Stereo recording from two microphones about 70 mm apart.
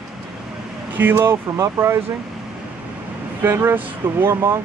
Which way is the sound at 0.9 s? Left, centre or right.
Right.